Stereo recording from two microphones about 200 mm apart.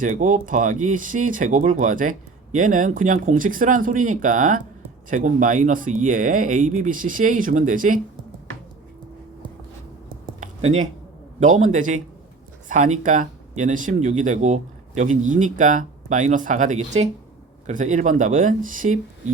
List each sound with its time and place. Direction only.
0.0 s speech: 40° right (ahead or behind)
10.4 s a sound: 35° right (ahead or behind)
11.3 s speech: 40° right (ahead or behind)